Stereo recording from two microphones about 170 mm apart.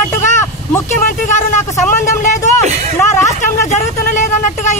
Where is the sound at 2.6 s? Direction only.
40° right (ahead or behind).